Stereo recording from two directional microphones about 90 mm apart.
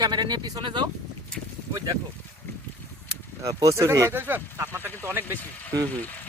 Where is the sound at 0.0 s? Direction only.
55° right (ahead or behind).